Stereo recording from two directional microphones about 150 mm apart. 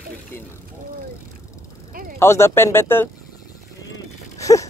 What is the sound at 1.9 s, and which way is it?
Speech, 70° right (ahead or behind).